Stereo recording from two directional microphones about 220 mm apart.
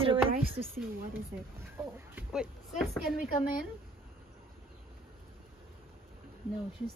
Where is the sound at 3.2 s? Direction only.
40° left (ahead or behind).